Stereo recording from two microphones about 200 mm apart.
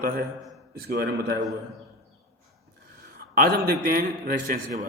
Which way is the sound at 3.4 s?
45° right (ahead or behind).